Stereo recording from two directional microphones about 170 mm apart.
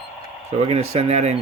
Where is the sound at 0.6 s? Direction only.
35° right (ahead or behind).